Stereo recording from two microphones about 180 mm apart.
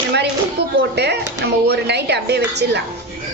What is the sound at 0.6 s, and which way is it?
Speech, 65° right (ahead or behind).